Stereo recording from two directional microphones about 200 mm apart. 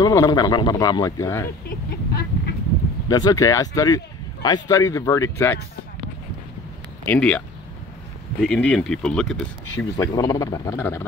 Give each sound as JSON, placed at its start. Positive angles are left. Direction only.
{"t": 0.0, "sound": "speech", "side_deg": 15}
{"t": 1.7, "sound": "vehicle", "side_deg": 50}
{"t": 3.1, "sound": "speech", "side_deg": 20}
{"t": 7.1, "sound": "speech", "side_deg": 5}
{"t": 9.9, "sound": "speech", "side_deg": 15}